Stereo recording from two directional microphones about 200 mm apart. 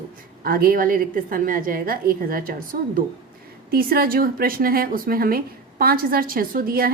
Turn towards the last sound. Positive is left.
turn(degrees=-45)  # may be behind; listen again after turning